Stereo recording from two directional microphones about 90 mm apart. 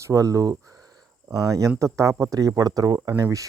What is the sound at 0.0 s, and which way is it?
Speech, 35° right (ahead or behind).